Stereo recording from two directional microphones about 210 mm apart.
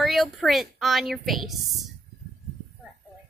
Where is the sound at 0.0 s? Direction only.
Centre (ahead or behind).